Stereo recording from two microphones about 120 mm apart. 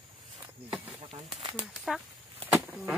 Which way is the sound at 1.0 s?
50° right (ahead or behind).